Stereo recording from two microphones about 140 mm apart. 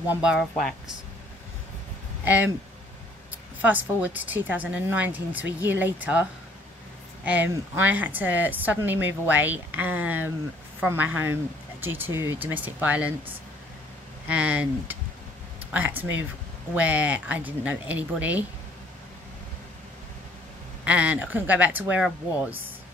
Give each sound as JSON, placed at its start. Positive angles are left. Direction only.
{"t": 0.1, "sound": "speech", "side_deg": -5}
{"t": 2.2, "sound": "speech", "side_deg": -10}
{"t": 3.6, "sound": "speech", "side_deg": -10}
{"t": 7.2, "sound": "speech", "side_deg": -15}
{"t": 14.2, "sound": "speech", "side_deg": -10}
{"t": 20.8, "sound": "speech", "side_deg": -10}